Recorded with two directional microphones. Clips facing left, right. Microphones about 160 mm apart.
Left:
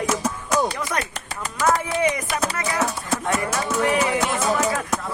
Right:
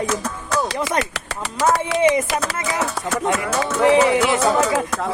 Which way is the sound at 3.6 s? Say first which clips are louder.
Right 9 dB; 90° right.